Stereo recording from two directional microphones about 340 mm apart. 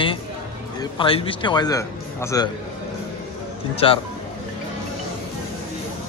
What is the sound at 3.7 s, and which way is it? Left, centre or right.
Speech, centre.